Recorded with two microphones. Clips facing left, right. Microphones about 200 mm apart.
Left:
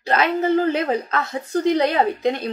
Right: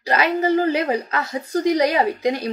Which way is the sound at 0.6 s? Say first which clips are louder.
Even; 10° right (ahead or behind).